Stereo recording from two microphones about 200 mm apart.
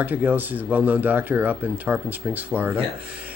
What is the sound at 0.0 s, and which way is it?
Speech, 10° right (ahead or behind).